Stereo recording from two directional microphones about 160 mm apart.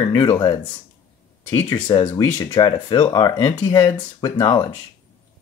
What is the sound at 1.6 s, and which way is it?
Speech, 25° left (ahead or behind).